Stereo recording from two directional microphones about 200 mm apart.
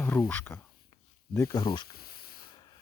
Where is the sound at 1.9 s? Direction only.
50° left (ahead or behind).